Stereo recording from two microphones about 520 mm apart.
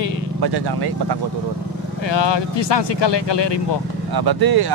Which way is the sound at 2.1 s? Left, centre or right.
Left.